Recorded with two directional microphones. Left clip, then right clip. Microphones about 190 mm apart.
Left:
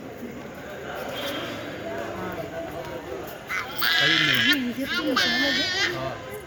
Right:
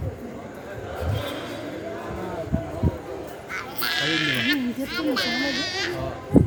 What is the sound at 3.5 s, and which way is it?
Sheep, 30° left (ahead or behind).